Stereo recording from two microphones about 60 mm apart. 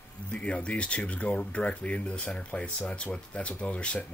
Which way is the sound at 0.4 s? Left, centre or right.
Centre.